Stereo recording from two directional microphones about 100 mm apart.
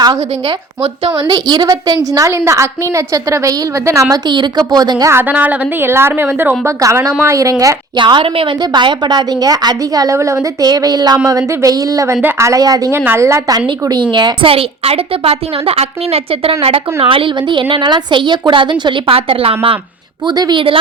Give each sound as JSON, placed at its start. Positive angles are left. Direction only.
{"t": 1.3, "sound": "a woman's voice", "side_deg": -40}
{"t": 2.3, "sound": "a woman's voice", "side_deg": -25}
{"t": 4.3, "sound": "a woman's voice", "side_deg": -45}
{"t": 5.1, "sound": "a woman's voice", "side_deg": -15}
{"t": 7.9, "sound": "a woman's voice", "side_deg": -50}
{"t": 8.6, "sound": "a woman's voice", "side_deg": -50}
{"t": 10.7, "sound": "a woman's voice", "side_deg": -40}
{"t": 13.8, "sound": "a woman's voice", "side_deg": -50}
{"t": 20.2, "sound": "a woman's voice", "side_deg": -45}